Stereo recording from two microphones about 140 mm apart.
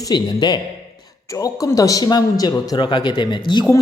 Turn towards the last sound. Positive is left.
turn(degrees=35)  # may be behind; listen again after turning